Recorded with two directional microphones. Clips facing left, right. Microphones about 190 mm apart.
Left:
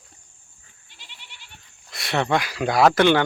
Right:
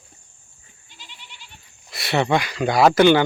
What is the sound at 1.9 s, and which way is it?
Speech, 5° right (ahead or behind).